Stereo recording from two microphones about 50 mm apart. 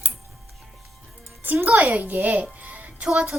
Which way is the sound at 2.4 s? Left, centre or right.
Right.